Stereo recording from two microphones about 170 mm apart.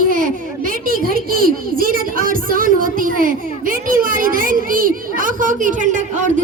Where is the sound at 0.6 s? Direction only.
55° right (ahead or behind).